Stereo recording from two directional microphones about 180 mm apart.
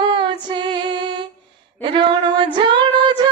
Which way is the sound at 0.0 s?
25° right (ahead or behind).